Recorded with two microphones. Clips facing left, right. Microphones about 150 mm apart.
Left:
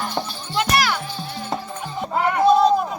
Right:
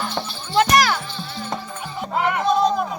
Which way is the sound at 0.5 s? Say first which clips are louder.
Right 4 dB; 40° right (ahead or behind).